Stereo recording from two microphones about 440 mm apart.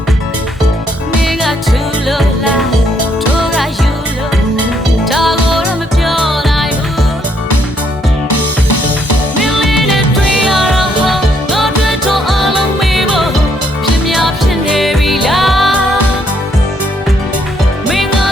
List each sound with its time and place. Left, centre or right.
3.0 s music: left
5.0 s music: centre
8.3 s music: left
10.7 s music: centre